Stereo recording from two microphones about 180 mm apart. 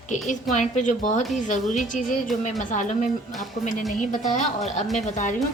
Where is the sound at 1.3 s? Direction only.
45° left (ahead or behind).